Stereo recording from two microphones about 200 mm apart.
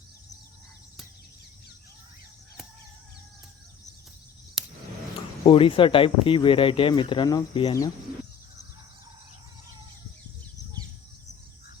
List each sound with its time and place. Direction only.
4.6 s scissors: centre (ahead or behind)
5.5 s speech: 25° left (ahead or behind)